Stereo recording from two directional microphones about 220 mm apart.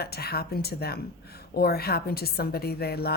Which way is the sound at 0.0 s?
45° left (ahead or behind).